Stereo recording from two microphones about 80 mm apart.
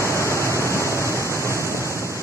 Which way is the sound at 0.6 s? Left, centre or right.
Left.